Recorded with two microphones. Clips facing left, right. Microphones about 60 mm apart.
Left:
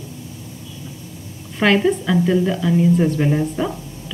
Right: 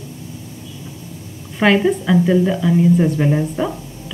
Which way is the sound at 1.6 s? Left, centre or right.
Centre.